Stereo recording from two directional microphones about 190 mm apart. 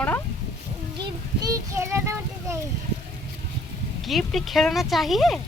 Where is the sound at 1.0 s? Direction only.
20° right (ahead or behind).